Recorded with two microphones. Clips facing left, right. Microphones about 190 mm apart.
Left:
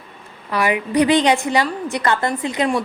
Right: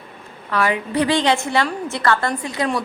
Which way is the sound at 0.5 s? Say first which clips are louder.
Left 2 dB; 15° left (ahead or behind).